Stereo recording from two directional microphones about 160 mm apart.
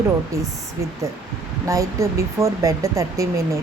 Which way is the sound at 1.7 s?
20° right (ahead or behind).